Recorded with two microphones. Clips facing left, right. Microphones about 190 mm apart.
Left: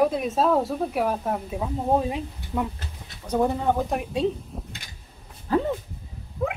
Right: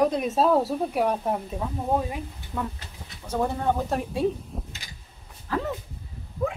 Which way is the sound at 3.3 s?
15° left (ahead or behind).